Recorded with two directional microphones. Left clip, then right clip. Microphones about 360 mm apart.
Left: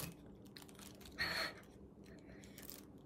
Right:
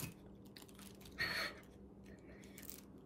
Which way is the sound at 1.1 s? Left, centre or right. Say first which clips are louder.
Even; centre.